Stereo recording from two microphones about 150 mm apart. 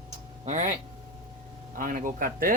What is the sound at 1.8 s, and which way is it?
Speech, 65° right (ahead or behind).